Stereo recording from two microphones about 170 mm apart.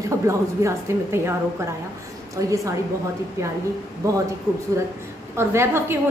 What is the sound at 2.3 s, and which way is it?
Speech, 20° right (ahead or behind).